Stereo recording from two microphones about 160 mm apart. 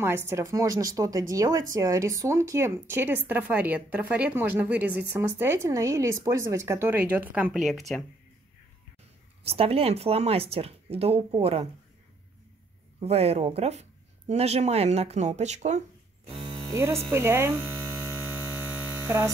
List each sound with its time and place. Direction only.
0.0 s speech: 15° right (ahead or behind); by 8.0 s centre (ahead or behind)
9.4 s speech: 40° right (ahead or behind)
13.0 s speech: 40° right (ahead or behind)
16.7 s speech: 15° right (ahead or behind)
18.0 s mains hum: 10° right (ahead or behind)